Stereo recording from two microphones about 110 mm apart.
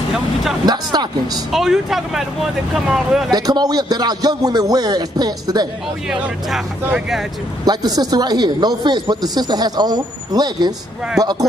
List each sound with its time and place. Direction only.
0.7 s a man's voice: 40° right (ahead or behind)
1.5 s speech: 5° right (ahead or behind)
3.3 s a man's voice: 40° right (ahead or behind)
6.0 s speech: 10° right (ahead or behind)
7.6 s a man's voice: 40° right (ahead or behind)